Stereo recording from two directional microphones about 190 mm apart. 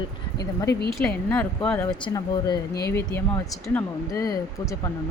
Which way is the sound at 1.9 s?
20° left (ahead or behind).